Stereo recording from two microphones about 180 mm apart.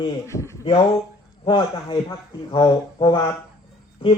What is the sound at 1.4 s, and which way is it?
A man's voice, 30° left (ahead or behind).